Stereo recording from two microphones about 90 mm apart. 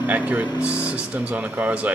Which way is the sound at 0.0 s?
15° right (ahead or behind).